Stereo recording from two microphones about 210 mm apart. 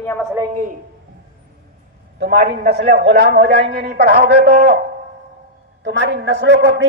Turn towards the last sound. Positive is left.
turn(degrees=-55)  # may be behind; listen again after turning